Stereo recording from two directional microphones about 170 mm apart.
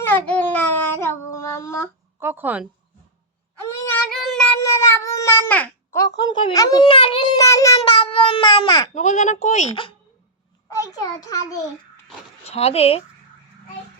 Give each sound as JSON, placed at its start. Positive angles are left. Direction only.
{"t": 0.0, "sound": "child singing", "side_deg": 10}
{"t": 2.1, "sound": "speech", "side_deg": -10}
{"t": 4.1, "sound": "child singing", "side_deg": 0}
{"t": 4.6, "sound": "babbling", "side_deg": 15}
{"t": 6.2, "sound": "speech", "side_deg": 20}
{"t": 7.3, "sound": "speech", "side_deg": 20}
{"t": 7.8, "sound": "speech", "side_deg": 35}
{"t": 9.0, "sound": "speech", "side_deg": 45}
{"t": 10.7, "sound": "speech", "side_deg": 20}
{"t": 12.5, "sound": "speech", "side_deg": 35}